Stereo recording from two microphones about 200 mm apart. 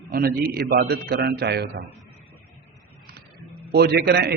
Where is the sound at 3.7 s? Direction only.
55° right (ahead or behind).